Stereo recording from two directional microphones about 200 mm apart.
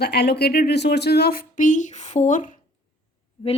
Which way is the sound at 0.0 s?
55° left (ahead or behind).